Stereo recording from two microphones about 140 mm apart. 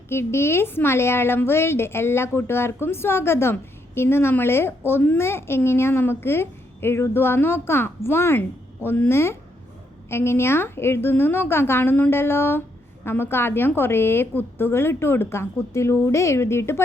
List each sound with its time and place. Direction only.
0.1 s a woman's voice: 20° left (ahead or behind)